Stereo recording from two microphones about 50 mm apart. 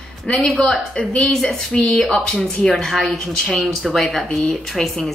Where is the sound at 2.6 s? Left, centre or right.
Centre.